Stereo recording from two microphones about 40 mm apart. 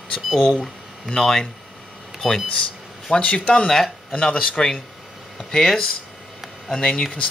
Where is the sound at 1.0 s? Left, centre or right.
Centre.